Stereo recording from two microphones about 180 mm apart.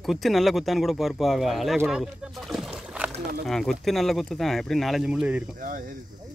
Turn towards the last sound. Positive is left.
turn(degrees=-50)  # may be behind; listen again after turning